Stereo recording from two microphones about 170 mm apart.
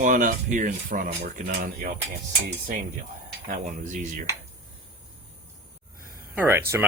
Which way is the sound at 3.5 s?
50° right (ahead or behind).